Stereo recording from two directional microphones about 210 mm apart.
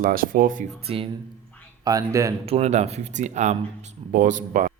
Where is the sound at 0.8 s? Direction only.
30° right (ahead or behind).